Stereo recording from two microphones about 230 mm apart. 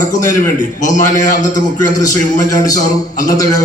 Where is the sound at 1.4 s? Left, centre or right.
Centre.